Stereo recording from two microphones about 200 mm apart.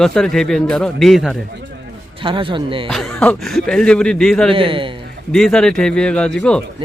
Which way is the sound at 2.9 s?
5° left (ahead or behind).